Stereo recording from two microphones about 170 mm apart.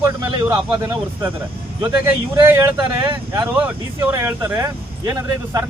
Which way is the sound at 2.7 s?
25° right (ahead or behind).